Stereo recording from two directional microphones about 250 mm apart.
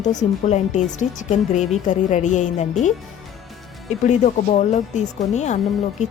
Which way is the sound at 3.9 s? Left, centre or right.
Left.